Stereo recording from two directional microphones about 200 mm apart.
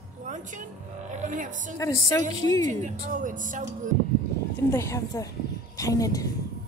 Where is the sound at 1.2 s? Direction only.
40° right (ahead or behind).